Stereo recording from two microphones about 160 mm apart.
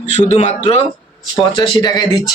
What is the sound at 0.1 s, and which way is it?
Speech, 45° left (ahead or behind).